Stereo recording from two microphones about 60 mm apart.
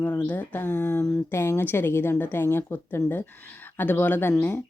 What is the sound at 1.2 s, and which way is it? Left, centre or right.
A woman's voice, left.